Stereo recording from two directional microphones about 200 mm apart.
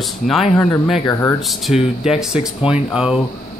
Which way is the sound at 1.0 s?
15° left (ahead or behind).